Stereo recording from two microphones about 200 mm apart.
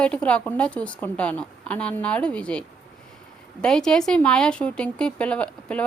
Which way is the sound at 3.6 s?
5° left (ahead or behind).